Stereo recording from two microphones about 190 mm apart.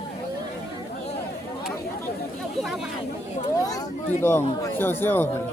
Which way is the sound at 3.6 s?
20° left (ahead or behind).